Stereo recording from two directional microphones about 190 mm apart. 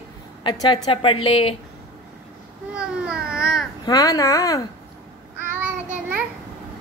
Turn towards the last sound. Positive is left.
turn(degrees=-10)  # may be behind; listen again after turning